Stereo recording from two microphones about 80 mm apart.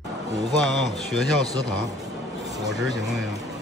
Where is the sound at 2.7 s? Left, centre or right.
Centre.